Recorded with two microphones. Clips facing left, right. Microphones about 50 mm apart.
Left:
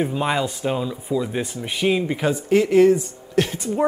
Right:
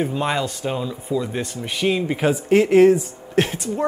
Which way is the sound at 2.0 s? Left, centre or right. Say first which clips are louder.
Right 2 dB; centre.